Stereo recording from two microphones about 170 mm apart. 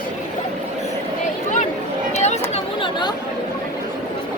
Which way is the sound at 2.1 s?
40° left (ahead or behind).